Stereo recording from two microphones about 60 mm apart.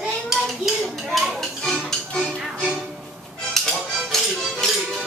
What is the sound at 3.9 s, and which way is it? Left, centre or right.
Music, centre.